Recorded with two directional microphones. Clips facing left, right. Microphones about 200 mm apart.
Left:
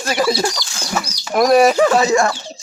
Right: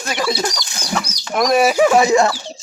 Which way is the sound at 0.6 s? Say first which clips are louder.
Even; 20° right (ahead or behind).